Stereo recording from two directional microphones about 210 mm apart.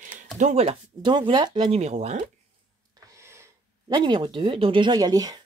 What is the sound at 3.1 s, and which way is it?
Speech, 15° right (ahead or behind).